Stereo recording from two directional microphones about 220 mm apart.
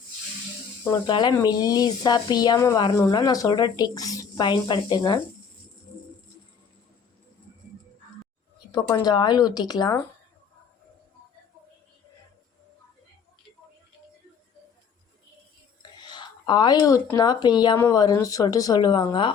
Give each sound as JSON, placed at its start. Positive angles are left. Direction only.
{"t": 1.0, "sound": "speech", "side_deg": 20}
{"t": 8.7, "sound": "speech", "side_deg": 20}
{"t": 15.8, "sound": "speech", "side_deg": 20}